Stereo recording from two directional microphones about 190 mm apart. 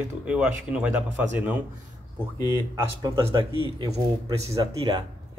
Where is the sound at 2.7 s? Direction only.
20° right (ahead or behind).